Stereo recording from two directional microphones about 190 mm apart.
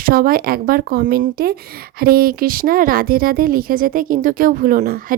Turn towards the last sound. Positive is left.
turn(degrees=-50)  # may be behind; listen again after turning